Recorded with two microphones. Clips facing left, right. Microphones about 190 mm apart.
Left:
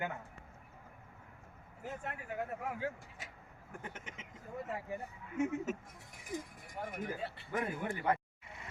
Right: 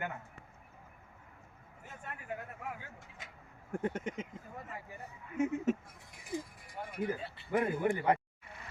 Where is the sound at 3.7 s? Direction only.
55° right (ahead or behind).